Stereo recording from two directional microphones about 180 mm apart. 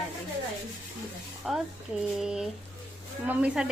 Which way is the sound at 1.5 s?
Centre (ahead or behind).